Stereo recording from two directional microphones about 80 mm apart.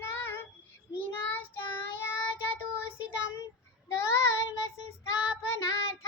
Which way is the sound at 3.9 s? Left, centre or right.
Left.